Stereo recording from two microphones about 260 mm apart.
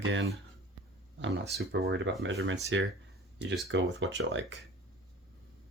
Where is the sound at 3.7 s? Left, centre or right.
Right.